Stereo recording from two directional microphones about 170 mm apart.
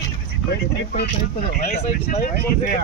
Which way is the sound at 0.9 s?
65° left (ahead or behind).